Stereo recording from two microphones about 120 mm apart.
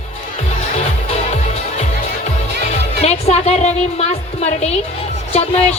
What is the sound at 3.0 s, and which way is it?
A woman's voice, 65° left (ahead or behind).